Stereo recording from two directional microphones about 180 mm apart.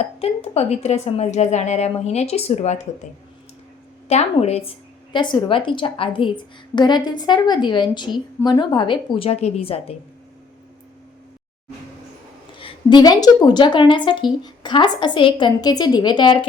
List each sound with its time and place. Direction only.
0.0 s a woman's voice: 35° left (ahead or behind)
4.1 s a woman's voice: 35° left (ahead or behind)
5.1 s a woman's voice: 25° left (ahead or behind)
12.5 s a woman's voice: 25° left (ahead or behind)